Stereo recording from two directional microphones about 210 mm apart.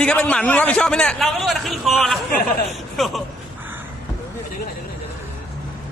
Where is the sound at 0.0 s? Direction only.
5° left (ahead or behind).